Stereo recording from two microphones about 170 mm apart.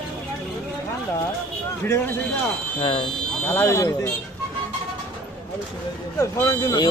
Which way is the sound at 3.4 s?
15° left (ahead or behind).